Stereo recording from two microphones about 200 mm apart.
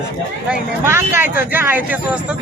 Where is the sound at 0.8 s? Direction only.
10° right (ahead or behind).